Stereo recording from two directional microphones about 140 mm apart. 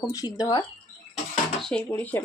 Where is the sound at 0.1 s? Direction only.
25° left (ahead or behind).